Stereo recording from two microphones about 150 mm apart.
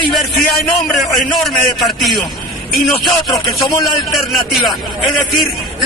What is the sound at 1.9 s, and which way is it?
Speech, centre (ahead or behind).